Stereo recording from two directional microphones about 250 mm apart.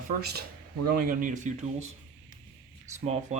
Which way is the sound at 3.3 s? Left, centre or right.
Right.